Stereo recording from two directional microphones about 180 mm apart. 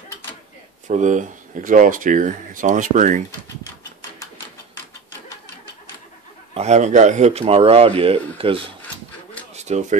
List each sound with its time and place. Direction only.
0.8 s speech: 45° right (ahead or behind)
6.5 s speech: 40° right (ahead or behind)
9.5 s a sound: 40° right (ahead or behind)